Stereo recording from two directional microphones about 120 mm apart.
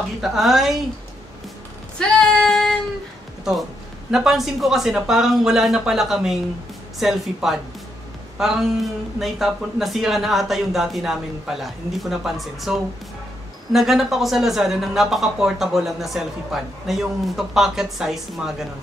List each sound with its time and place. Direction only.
0.2 s speech: centre (ahead or behind)
2.0 s female singing: 5° left (ahead or behind)
4.1 s speech: 5° right (ahead or behind)